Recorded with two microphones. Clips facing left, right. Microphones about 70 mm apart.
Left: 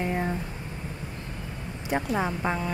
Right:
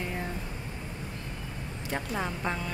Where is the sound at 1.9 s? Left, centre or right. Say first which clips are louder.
Left 6 dB; centre.